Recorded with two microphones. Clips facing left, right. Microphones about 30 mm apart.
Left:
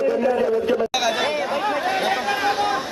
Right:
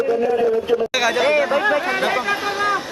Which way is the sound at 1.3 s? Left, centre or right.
Right.